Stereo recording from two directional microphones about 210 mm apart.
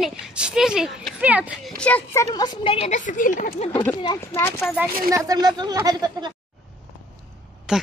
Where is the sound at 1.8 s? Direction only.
5° left (ahead or behind); by 3.7 s 35° left (ahead or behind).